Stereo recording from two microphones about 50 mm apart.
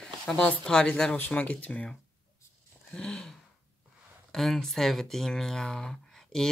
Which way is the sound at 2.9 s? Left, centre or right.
Centre.